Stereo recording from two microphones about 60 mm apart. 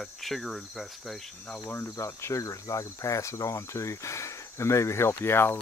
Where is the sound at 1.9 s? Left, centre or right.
Left.